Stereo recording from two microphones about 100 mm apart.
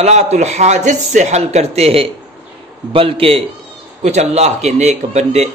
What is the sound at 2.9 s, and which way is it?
Speech, 65° right (ahead or behind).